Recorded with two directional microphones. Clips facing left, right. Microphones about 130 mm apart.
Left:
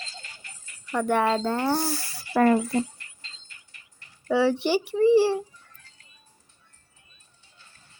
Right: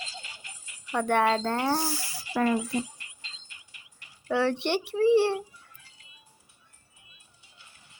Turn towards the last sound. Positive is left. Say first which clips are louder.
# even
turn(degrees=-15)  # may be behind; listen again after turning